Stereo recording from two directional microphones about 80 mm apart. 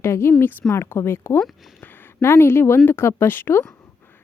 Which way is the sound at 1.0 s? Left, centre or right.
Left.